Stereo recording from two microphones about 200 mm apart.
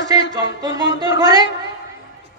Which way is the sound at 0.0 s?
60° left (ahead or behind).